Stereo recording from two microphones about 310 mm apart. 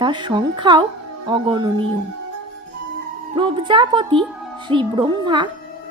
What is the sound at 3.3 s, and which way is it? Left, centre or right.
A woman's voice, centre.